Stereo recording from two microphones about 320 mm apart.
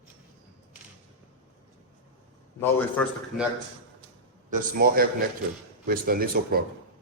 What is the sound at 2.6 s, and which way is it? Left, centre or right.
Speech, centre.